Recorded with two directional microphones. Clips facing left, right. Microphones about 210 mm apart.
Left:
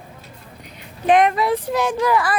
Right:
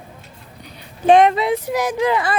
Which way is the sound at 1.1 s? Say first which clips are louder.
Right 3 dB; 25° right (ahead or behind).